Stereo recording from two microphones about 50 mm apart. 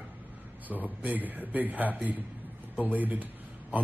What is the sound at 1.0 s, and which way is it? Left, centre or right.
Speech, right.